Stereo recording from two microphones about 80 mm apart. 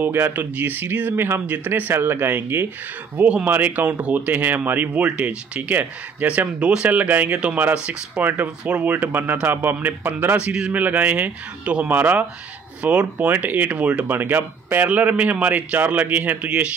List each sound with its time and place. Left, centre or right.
0.0 s speech: right
10.4 s speech: centre